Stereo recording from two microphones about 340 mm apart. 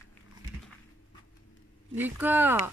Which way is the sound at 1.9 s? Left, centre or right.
Centre.